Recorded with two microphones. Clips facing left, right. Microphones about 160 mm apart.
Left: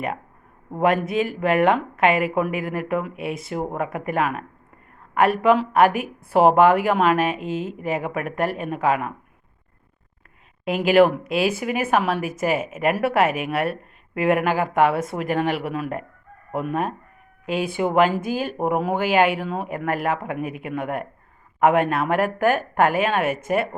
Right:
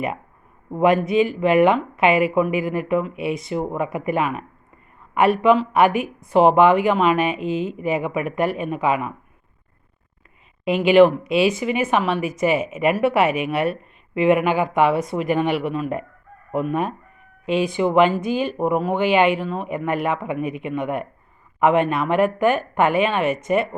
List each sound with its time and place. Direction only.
0.8 s speech: centre (ahead or behind)
10.7 s speech: 5° left (ahead or behind)
16.5 s chicken: 5° left (ahead or behind)
17.4 s speech: 5° left (ahead or behind)